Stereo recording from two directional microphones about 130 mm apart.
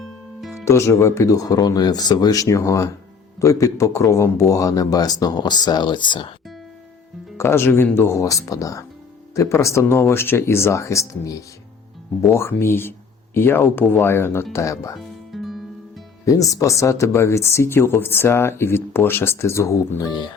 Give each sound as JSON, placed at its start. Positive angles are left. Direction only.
{"t": 0.6, "sound": "speech", "side_deg": 20}
{"t": 7.3, "sound": "speech", "side_deg": 20}
{"t": 14.9, "sound": "music", "side_deg": 0}
{"t": 16.2, "sound": "speech", "side_deg": 25}